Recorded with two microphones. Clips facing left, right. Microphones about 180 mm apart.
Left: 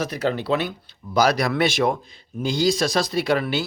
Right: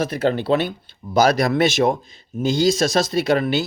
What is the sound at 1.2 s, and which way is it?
Speech, 45° right (ahead or behind).